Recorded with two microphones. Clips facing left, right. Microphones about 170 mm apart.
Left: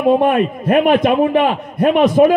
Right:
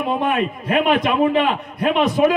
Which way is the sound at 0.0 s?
50° left (ahead or behind).